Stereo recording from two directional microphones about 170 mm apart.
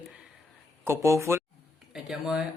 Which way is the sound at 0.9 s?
15° right (ahead or behind).